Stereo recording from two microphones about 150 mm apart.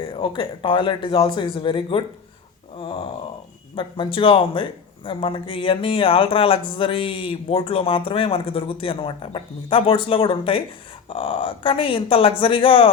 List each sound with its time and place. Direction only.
0.0 s speech: 35° left (ahead or behind)